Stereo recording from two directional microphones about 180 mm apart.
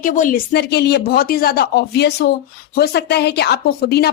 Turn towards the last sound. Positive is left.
turn(degrees=60)  # may be behind; listen again after turning